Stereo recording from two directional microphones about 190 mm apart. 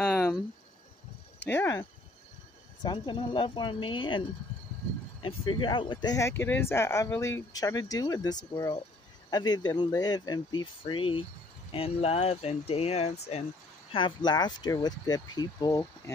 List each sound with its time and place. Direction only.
0.0 s cricket: 5° left (ahead or behind)
1.4 s speech: 10° left (ahead or behind)
5.2 s speech: 25° left (ahead or behind)
13.9 s speech: 25° left (ahead or behind)